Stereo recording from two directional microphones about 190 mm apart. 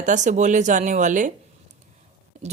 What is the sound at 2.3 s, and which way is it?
Whispering, 40° right (ahead or behind).